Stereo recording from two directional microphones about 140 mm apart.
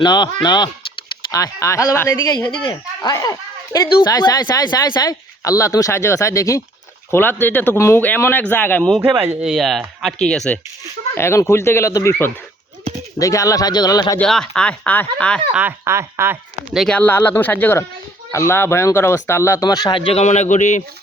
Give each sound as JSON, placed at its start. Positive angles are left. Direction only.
{"t": 0.0, "sound": "speech", "side_deg": 30}
{"t": 9.1, "sound": "speech", "side_deg": -15}
{"t": 9.4, "sound": "speech", "side_deg": 0}
{"t": 11.1, "sound": "speech", "side_deg": 20}
{"t": 14.2, "sound": "speech", "side_deg": 5}
{"t": 15.5, "sound": "speech", "side_deg": -15}
{"t": 16.7, "sound": "speech", "side_deg": 5}
{"t": 20.2, "sound": "a man's voice", "side_deg": 55}